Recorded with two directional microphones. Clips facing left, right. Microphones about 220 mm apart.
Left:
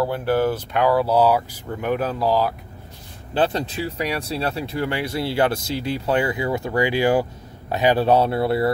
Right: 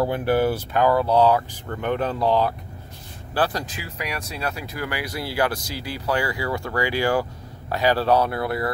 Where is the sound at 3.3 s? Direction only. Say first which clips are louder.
Left 3 dB; 25° left (ahead or behind).